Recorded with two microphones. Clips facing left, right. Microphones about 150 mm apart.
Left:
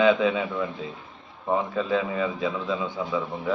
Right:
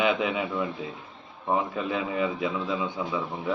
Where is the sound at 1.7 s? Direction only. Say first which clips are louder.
Left 3 dB; 15° right (ahead or behind).